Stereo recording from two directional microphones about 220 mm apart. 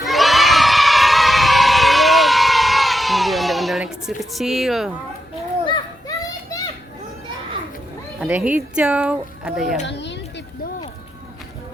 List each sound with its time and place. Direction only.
0.0 s children shouting: centre (ahead or behind)
5.6 s children playing: 20° left (ahead or behind)
8.2 s speech: 5° right (ahead or behind)
9.8 s a sound: 55° left (ahead or behind)